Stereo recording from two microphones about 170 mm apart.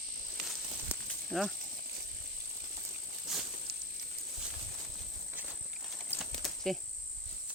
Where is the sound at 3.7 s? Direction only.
70° right (ahead or behind).